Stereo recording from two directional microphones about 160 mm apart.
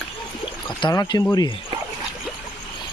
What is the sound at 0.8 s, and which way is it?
Speech, 25° left (ahead or behind).